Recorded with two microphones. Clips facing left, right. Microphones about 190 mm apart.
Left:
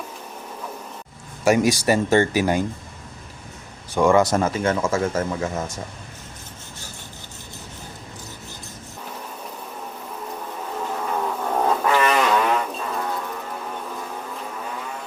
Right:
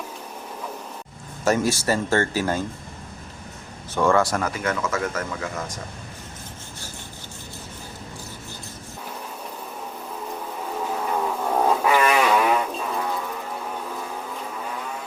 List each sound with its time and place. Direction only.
1.5 s speech: 15° left (ahead or behind)
3.9 s speech: 15° left (ahead or behind)
10.4 s insect: 5° right (ahead or behind)